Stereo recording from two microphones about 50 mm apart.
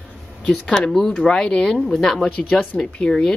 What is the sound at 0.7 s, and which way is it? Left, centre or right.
Speech, centre.